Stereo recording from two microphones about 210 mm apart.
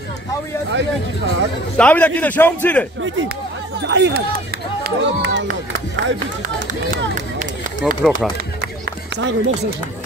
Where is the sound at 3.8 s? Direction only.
55° right (ahead or behind).